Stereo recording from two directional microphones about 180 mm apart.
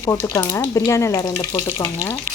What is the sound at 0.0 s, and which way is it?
Speech, 15° left (ahead or behind).